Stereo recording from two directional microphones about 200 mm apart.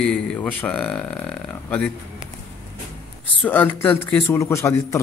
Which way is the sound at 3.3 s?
10° left (ahead or behind).